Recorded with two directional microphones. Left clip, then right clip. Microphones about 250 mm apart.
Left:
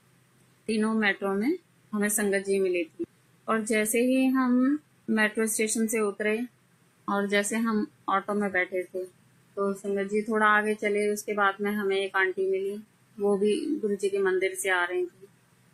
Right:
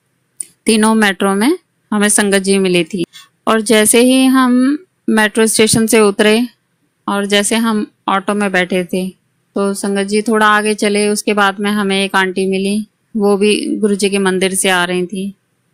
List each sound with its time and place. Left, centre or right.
0.6 s speech: right
7.0 s speech: right